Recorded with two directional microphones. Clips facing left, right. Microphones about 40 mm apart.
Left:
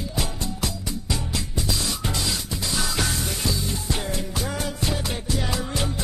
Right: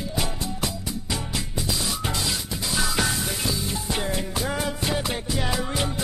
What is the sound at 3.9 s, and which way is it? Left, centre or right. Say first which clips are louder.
Music: right 1 dB; centre.